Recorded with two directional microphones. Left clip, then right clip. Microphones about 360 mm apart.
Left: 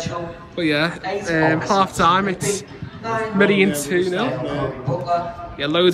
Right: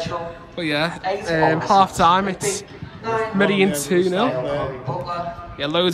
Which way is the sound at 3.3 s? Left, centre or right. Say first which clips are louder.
Left 3 dB; centre.